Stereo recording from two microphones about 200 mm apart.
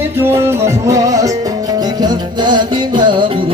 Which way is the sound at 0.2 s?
10° right (ahead or behind).